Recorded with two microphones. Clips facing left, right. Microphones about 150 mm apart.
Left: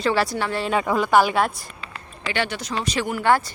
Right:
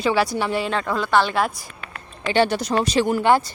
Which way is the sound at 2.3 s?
35° right (ahead or behind).